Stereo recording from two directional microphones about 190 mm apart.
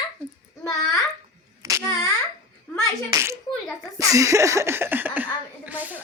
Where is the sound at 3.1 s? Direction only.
15° right (ahead or behind).